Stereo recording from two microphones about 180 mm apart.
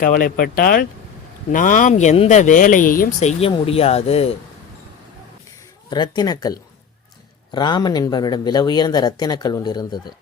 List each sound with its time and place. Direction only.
0.0 s speech: 50° left (ahead or behind); by 4.4 s 35° left (ahead or behind)
5.9 s speech: 25° left (ahead or behind)